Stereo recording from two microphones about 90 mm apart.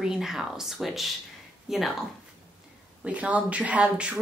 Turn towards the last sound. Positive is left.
turn(degrees=-15)  # may be behind; listen again after turning